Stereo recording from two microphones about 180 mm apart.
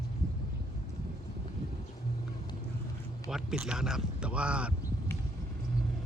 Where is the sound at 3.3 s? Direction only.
5° right (ahead or behind).